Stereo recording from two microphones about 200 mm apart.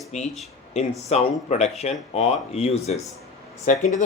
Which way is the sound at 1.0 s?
35° left (ahead or behind).